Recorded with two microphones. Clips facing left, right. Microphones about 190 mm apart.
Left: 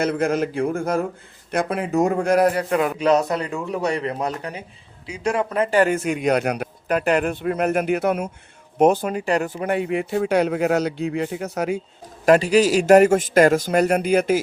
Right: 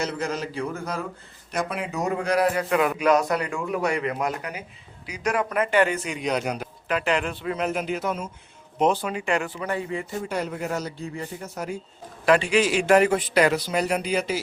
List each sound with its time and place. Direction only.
0.0 s a man's voice: 55° left (ahead or behind)
6.8 s speech: 45° left (ahead or behind); by 8.3 s 65° left (ahead or behind)
8.8 s a man's voice: 50° left (ahead or behind)
9.7 s speech: 70° left (ahead or behind)
12.2 s a man's voice: 40° left (ahead or behind)